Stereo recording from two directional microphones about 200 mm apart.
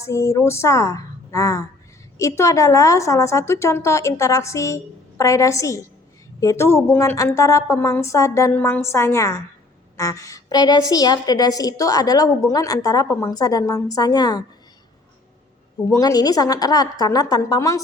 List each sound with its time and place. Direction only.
0.0 s a woman's voice: 15° left (ahead or behind)
15.9 s a woman's voice: 15° left (ahead or behind)